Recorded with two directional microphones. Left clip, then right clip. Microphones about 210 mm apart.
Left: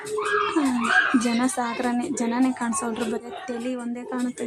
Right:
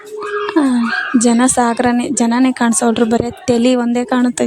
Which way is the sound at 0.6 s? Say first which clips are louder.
Right 9 dB; 35° right (ahead or behind).